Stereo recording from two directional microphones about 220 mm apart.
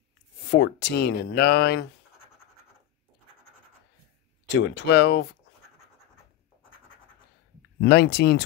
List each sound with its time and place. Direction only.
0.5 s speech: 50° left (ahead or behind)
4.5 s speech: 50° left (ahead or behind)
7.8 s speech: 50° left (ahead or behind)